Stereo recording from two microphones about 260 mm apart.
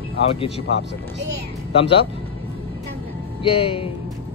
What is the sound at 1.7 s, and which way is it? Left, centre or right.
Speech, left.